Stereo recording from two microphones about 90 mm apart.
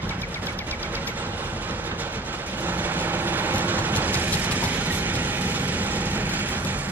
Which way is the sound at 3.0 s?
20° right (ahead or behind).